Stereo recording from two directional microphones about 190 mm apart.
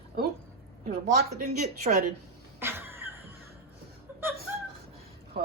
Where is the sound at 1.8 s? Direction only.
50° right (ahead or behind).